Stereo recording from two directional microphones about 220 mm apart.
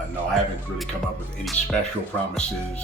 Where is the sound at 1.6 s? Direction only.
30° left (ahead or behind).